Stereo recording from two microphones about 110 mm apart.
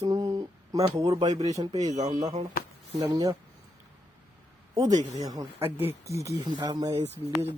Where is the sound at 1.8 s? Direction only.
90° right.